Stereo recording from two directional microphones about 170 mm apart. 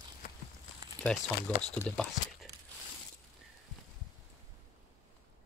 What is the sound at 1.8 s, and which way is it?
Speech, 5° left (ahead or behind).